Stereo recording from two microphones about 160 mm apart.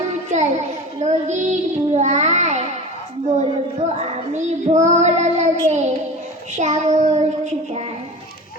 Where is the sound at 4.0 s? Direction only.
45° right (ahead or behind).